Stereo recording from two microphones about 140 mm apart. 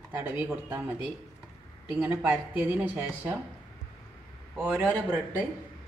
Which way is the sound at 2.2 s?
10° right (ahead or behind).